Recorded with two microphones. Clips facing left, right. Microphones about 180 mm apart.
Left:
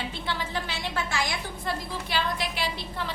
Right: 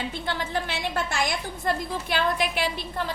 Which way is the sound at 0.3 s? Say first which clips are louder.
Right 3 dB; 50° right (ahead or behind).